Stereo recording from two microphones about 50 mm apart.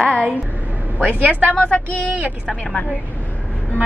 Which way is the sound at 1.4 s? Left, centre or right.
Left.